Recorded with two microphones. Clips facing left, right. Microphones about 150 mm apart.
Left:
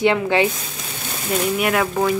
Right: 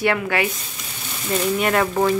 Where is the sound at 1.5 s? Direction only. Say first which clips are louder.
Right 2 dB; 5° left (ahead or behind).